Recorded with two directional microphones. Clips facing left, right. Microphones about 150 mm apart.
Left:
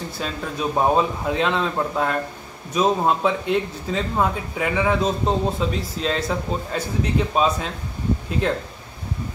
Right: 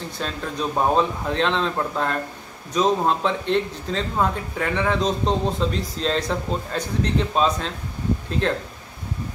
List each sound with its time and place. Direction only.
0.2 s speech: 5° left (ahead or behind)